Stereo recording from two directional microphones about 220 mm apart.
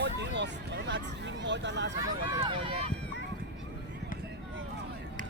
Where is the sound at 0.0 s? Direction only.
55° right (ahead or behind).